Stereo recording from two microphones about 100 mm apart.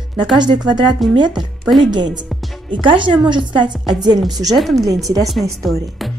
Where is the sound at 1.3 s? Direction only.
Centre (ahead or behind).